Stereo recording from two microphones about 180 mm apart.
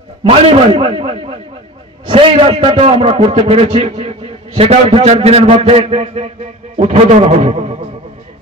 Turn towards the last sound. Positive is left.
turn(degrees=-35)  # may be behind; listen again after turning